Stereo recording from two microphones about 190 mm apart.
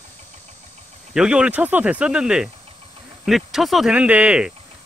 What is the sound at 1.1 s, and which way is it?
Speech, 5° right (ahead or behind).